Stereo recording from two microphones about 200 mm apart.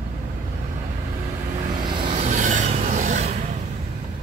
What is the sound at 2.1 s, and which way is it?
Vehicle, 35° right (ahead or behind).